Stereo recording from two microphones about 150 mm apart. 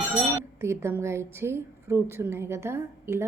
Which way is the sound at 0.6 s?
20° right (ahead or behind).